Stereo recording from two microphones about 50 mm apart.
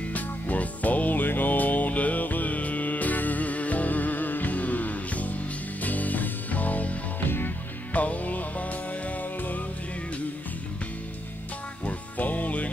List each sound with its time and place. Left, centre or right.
0.1 s music: left
7.2 s music: left
7.9 s music: left
11.8 s music: left